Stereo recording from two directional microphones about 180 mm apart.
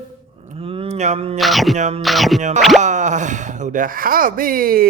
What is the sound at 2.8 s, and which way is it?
Speech, 40° right (ahead or behind).